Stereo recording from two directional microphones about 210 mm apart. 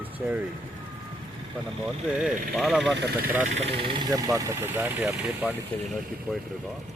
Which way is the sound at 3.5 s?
30° right (ahead or behind).